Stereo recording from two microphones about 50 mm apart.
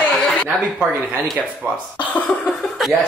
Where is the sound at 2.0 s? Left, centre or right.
Left.